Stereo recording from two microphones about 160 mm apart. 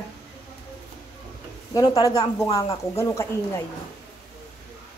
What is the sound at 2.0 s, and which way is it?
Speech, 20° left (ahead or behind).